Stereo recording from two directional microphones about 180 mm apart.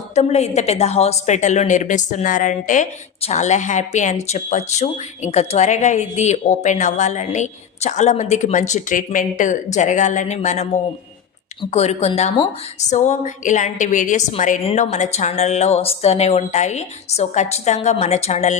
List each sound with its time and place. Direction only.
0.1 s a woman's voice: 35° left (ahead or behind)